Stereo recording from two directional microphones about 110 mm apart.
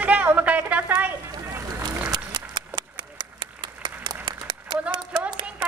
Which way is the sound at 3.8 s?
45° right (ahead or behind).